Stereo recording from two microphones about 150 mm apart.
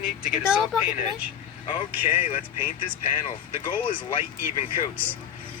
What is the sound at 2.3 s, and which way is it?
Speech, 40° left (ahead or behind).